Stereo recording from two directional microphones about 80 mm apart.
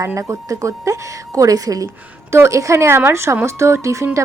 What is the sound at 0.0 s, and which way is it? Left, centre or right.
A woman's voice, right.